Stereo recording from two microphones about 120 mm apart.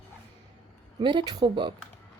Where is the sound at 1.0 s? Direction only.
40° right (ahead or behind).